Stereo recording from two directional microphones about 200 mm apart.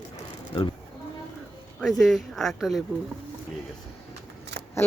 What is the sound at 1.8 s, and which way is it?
Speech, centre (ahead or behind).